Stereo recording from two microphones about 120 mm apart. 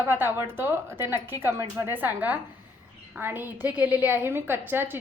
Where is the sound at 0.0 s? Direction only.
15° right (ahead or behind).